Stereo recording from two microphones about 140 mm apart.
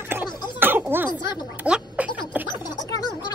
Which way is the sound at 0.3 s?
30° left (ahead or behind).